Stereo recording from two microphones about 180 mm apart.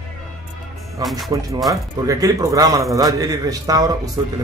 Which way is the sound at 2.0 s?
20° right (ahead or behind).